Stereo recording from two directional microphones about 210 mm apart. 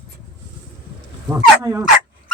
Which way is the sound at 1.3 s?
15° right (ahead or behind).